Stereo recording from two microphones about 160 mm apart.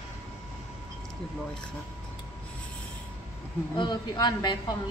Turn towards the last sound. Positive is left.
turn(degrees=25)  # may be behind; listen again after turning